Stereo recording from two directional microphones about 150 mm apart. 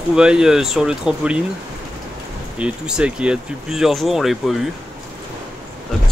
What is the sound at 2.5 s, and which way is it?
Speech, 5° right (ahead or behind).